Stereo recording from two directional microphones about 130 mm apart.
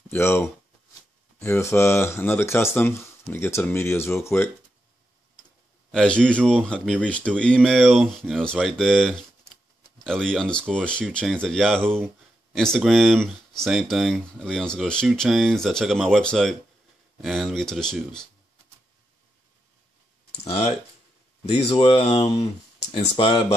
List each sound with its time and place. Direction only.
0.1 s speech: 20° left (ahead or behind)
5.9 s speech: 5° left (ahead or behind)
11.8 s speech: 15° right (ahead or behind)
12.5 s speech: centre (ahead or behind)
20.4 s speech: 50° left (ahead or behind)